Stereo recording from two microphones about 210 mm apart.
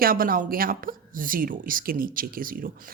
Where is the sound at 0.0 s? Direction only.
45° right (ahead or behind).